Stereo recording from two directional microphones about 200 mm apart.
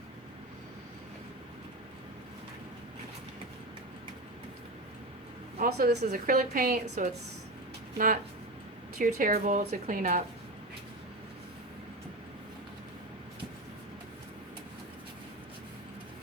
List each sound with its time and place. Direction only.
5.5 s a woman's voice: 50° right (ahead or behind)